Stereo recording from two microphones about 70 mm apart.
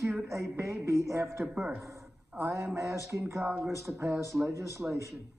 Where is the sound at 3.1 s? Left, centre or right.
Right.